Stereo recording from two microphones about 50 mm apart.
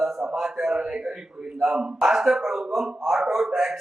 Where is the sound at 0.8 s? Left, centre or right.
Centre.